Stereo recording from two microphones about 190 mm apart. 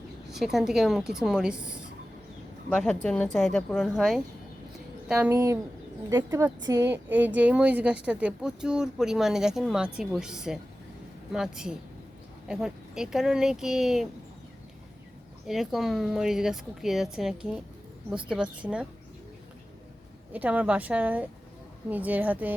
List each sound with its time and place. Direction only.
0.3 s a woman's voice: centre (ahead or behind)
15.4 s a woman's voice: centre (ahead or behind)
20.3 s a woman's voice: 10° right (ahead or behind)